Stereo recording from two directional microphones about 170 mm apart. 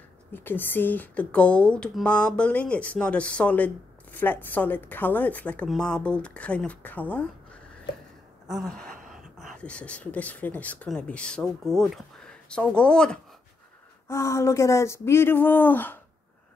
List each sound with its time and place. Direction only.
0.3 s speech: 10° left (ahead or behind)
8.5 s speech: centre (ahead or behind)
14.0 s speech: 15° left (ahead or behind)